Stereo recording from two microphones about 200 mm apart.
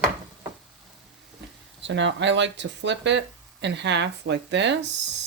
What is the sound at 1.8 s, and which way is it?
Speech, 65° right (ahead or behind).